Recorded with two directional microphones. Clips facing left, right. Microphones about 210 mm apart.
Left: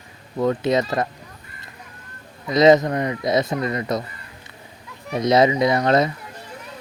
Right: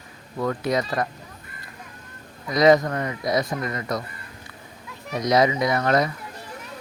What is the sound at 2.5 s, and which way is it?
Speech, 25° left (ahead or behind).